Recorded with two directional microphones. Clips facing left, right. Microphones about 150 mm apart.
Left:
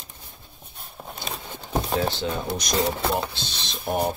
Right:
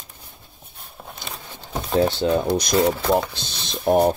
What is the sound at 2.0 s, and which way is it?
Speech, 30° right (ahead or behind).